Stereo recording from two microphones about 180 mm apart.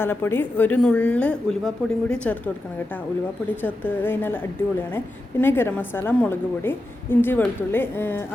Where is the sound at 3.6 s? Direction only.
10° left (ahead or behind).